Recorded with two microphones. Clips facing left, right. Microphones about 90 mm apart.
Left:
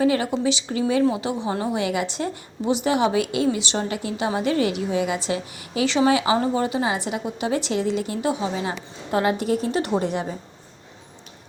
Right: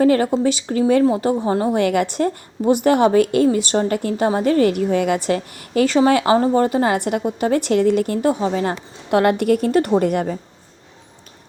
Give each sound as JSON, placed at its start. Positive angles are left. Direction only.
{"t": 0.0, "sound": "a woman's voice", "side_deg": -45}